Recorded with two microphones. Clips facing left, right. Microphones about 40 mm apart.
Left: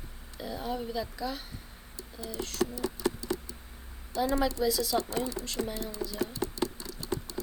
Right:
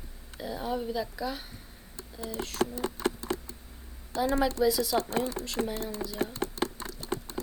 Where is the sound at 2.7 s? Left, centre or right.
Right.